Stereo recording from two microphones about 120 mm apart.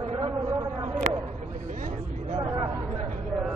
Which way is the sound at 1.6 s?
90° right.